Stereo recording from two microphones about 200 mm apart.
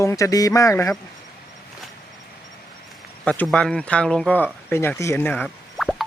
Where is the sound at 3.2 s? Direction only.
5° left (ahead or behind).